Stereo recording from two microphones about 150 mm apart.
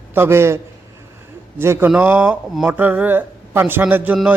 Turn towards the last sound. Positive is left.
turn(degrees=-10)  # may be behind; listen again after turning